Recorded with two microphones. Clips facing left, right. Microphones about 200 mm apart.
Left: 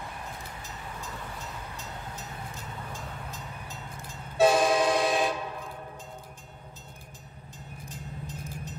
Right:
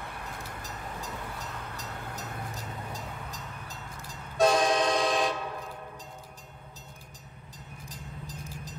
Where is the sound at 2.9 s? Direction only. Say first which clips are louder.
Even; 35° right (ahead or behind).